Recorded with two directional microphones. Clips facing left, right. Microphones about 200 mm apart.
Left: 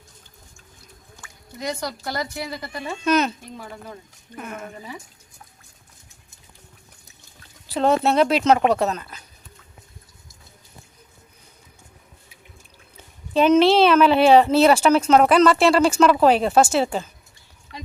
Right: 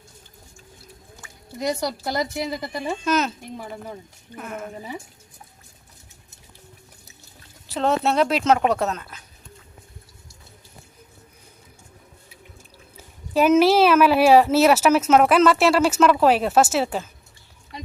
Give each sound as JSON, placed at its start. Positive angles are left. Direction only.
{"t": 1.7, "sound": "a woman's voice", "side_deg": -15}
{"t": 3.0, "sound": "speech", "side_deg": 0}
{"t": 3.6, "sound": "a woman's voice", "side_deg": -15}
{"t": 4.4, "sound": "speech", "side_deg": 0}
{"t": 7.7, "sound": "speech", "side_deg": 0}
{"t": 13.0, "sound": "speech", "side_deg": -5}